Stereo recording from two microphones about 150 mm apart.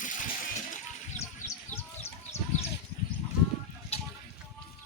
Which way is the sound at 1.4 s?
55° left (ahead or behind).